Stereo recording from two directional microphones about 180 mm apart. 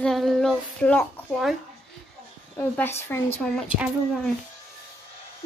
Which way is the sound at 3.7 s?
5° right (ahead or behind).